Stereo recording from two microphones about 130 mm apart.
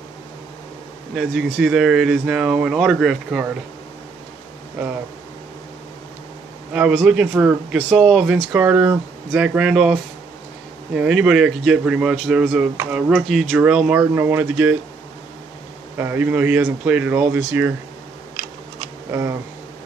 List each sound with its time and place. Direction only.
1.1 s speech: 5° right (ahead or behind)
6.7 s speech: 10° right (ahead or behind)
11.0 s speech: 5° right (ahead or behind)
16.0 s speech: 15° right (ahead or behind)
19.1 s speech: 20° right (ahead or behind)